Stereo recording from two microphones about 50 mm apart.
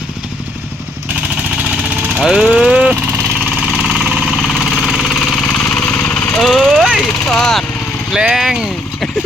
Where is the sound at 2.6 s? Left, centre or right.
Right.